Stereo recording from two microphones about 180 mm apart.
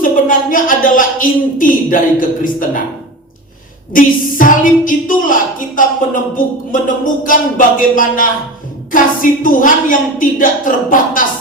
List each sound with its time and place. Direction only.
0.0 s speech: 50° left (ahead or behind)
3.9 s a woman's voice: 50° left (ahead or behind)